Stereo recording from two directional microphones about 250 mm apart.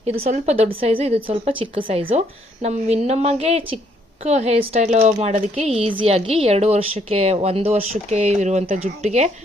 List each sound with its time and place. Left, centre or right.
0.0 s a woman's voice: right